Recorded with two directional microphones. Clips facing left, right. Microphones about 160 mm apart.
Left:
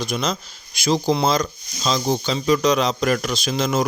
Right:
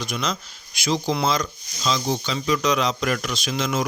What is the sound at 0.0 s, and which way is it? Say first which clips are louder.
Speech: left 3 dB; 30° left (ahead or behind).